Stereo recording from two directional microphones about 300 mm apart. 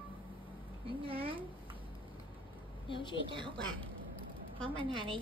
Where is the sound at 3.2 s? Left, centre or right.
Centre.